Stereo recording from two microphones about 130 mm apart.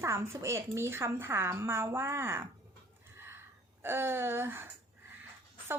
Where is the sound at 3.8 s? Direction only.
15° right (ahead or behind).